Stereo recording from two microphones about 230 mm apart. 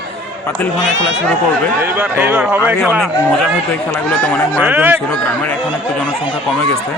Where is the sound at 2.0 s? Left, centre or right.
Centre.